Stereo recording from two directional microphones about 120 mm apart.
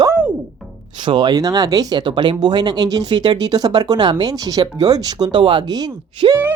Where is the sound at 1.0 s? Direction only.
40° right (ahead or behind).